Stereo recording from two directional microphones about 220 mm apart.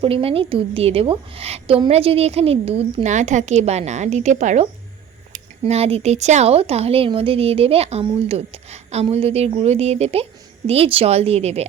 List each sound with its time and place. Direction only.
0.0 s a woman's voice: 25° right (ahead or behind)